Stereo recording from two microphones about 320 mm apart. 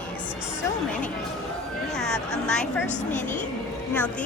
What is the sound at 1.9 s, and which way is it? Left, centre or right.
Speech, centre.